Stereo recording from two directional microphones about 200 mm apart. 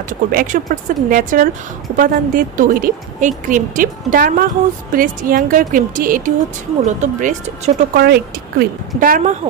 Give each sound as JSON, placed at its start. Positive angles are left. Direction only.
{"t": 0.1, "sound": "speech", "side_deg": -45}
{"t": 7.9, "sound": "speech", "side_deg": -50}